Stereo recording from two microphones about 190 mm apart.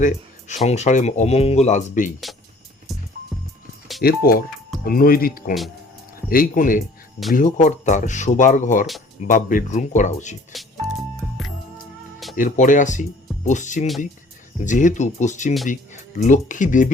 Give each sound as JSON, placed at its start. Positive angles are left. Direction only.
{"t": 0.0, "sound": "speech", "side_deg": 40}
{"t": 4.0, "sound": "speech", "side_deg": 50}
{"t": 10.5, "sound": "music", "side_deg": 0}
{"t": 12.4, "sound": "speech", "side_deg": 45}